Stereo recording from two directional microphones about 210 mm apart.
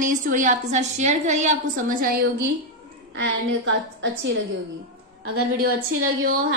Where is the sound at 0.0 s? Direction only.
40° right (ahead or behind).